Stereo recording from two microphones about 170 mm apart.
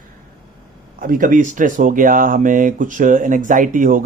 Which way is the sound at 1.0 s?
55° right (ahead or behind).